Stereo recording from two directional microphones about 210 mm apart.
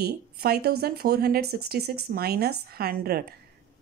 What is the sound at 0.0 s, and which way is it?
Speech, 50° right (ahead or behind).